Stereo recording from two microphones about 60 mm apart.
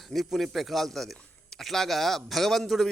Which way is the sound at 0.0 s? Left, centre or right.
Centre.